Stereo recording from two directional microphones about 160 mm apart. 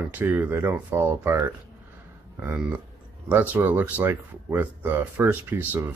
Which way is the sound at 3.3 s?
10° right (ahead or behind).